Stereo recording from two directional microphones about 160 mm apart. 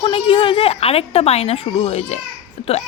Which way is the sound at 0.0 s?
35° left (ahead or behind).